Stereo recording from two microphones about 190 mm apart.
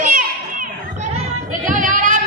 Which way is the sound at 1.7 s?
45° right (ahead or behind).